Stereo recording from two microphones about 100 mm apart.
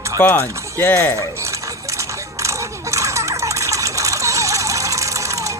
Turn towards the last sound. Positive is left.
turn(degrees=-30)  # may be behind; listen again after turning